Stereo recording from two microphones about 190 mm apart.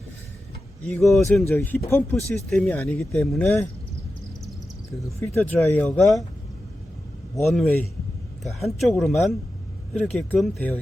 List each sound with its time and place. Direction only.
0.9 s speech: centre (ahead or behind)
5.0 s speech: 10° left (ahead or behind)
7.4 s speech: centre (ahead or behind)